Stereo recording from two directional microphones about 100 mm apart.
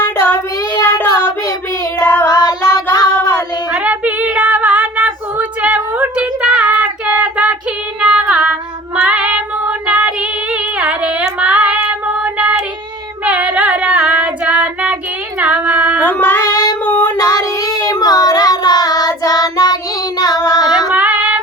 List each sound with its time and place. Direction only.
0.7 s child singing: 20° left (ahead or behind)
2.2 s child singing: 40° left (ahead or behind)
3.7 s female singing: 10° right (ahead or behind)
9.0 s child singing: 10° right (ahead or behind)
9.8 s female singing: 10° right (ahead or behind)
16.0 s female singing: 20° left (ahead or behind)
17.2 s child singing: 35° left (ahead or behind)
20.9 s female singing: 15° right (ahead or behind)